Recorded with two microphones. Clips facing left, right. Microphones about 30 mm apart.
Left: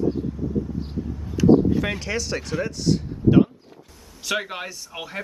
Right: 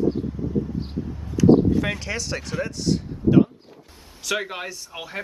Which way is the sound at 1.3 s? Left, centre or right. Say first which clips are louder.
Even; centre.